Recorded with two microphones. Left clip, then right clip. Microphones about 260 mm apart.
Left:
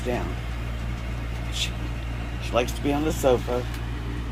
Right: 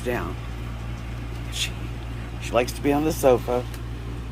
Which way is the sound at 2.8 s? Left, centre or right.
Right.